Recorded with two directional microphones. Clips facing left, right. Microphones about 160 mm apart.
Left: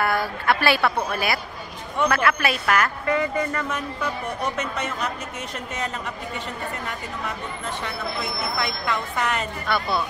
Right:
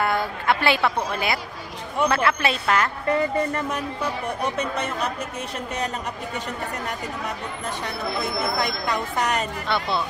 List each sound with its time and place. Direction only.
0.0 s a woman's voice: 20° right (ahead or behind)
8.5 s speech: 40° right (ahead or behind)
9.7 s a woman's voice: 25° right (ahead or behind)